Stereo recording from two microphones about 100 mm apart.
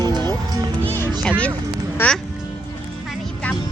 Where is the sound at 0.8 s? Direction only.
20° left (ahead or behind).